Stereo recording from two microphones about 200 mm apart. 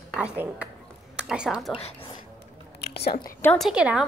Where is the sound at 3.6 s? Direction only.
5° right (ahead or behind).